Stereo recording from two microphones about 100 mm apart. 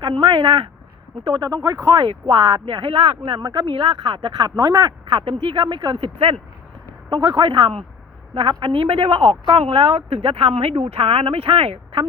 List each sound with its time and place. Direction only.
0.0 s a woman's voice: 50° right (ahead or behind)
1.2 s speech: 40° right (ahead or behind)
2.0 s speech: 50° right (ahead or behind)
6.1 s speech: 75° right (ahead or behind)
7.1 s a woman's voice: 45° right (ahead or behind); by 11.8 s 70° right (ahead or behind)